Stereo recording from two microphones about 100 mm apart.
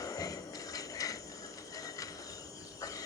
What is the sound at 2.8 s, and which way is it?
Cricket, 35° left (ahead or behind).